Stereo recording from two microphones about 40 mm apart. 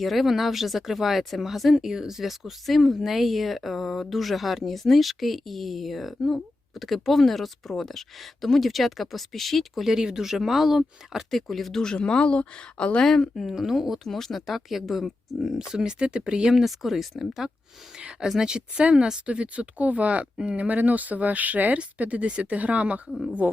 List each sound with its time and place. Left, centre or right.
0.0 s speech: centre
1.7 s speech: centre
9.8 s speech: centre
11.3 s speech: centre
11.8 s speech: centre
13.3 s speech: centre
13.6 s speech: centre
14.4 s speech: centre
15.5 s speech: centre
16.5 s speech: centre
18.3 s speech: centre
19.2 s speech: right
20.7 s speech: right
23.4 s speech: right